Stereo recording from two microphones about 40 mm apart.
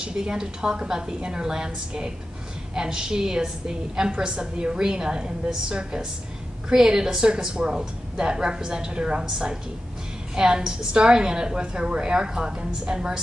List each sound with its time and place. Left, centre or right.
0.0 s a woman's voice: centre